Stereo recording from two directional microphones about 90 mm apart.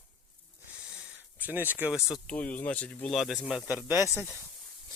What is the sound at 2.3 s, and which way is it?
Speech, 15° left (ahead or behind).